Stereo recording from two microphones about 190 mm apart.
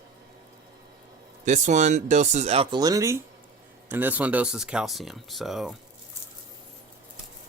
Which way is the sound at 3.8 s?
10° right (ahead or behind).